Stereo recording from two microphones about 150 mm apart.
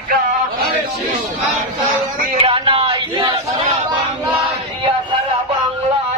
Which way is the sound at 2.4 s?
35° right (ahead or behind).